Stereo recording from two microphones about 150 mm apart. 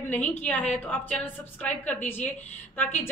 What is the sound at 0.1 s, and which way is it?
A woman's voice, 10° left (ahead or behind).